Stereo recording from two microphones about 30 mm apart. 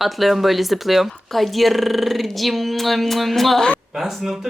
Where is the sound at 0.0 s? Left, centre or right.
Centre.